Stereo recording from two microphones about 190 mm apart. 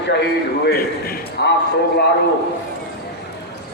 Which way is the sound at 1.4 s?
60° left (ahead or behind).